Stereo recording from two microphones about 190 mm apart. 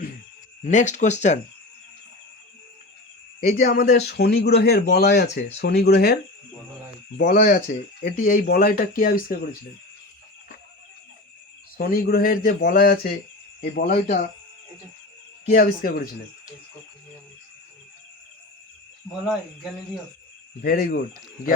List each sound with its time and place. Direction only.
0.6 s speech: 40° left (ahead or behind)
3.4 s speech: 45° left (ahead or behind)
3.9 s speech: 60° left (ahead or behind)
7.2 s speech: 50° left (ahead or behind)
11.8 s speech: 50° left (ahead or behind)
15.5 s speech: 50° left (ahead or behind)
20.6 s speech: 55° left (ahead or behind)